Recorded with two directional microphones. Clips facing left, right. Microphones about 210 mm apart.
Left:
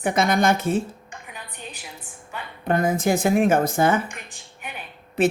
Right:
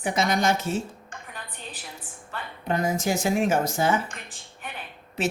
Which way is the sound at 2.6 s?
55° left (ahead or behind).